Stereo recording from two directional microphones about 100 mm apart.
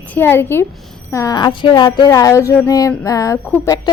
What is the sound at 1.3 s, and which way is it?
Speech, 50° left (ahead or behind).